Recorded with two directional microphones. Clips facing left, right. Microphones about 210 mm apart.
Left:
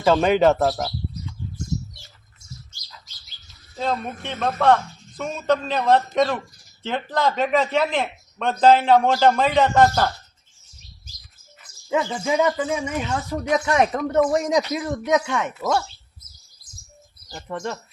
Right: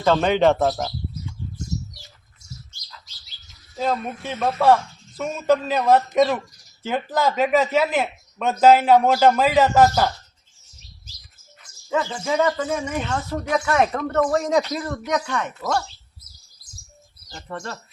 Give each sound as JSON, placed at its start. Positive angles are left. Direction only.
{"t": 0.0, "sound": "speech", "side_deg": 5}
{"t": 3.8, "sound": "speech", "side_deg": -5}
{"t": 11.9, "sound": "speech", "side_deg": 10}
{"t": 14.1, "sound": "speech", "side_deg": 15}
{"t": 17.2, "sound": "speech", "side_deg": 15}